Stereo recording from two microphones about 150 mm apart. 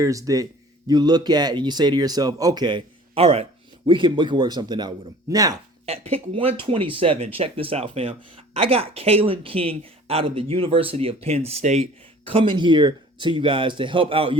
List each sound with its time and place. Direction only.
0.0 s speech: 25° right (ahead or behind)
5.8 s speech: 40° right (ahead or behind)